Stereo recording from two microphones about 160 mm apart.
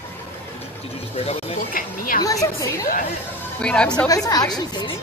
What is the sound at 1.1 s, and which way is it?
Speech, 40° left (ahead or behind).